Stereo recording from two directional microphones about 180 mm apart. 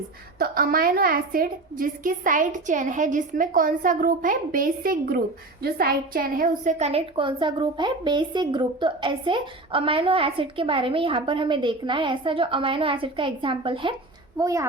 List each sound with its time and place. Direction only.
0.3 s a woman's voice: 55° right (ahead or behind); by 13.9 s 30° right (ahead or behind)
14.3 s a child's voice: 20° right (ahead or behind)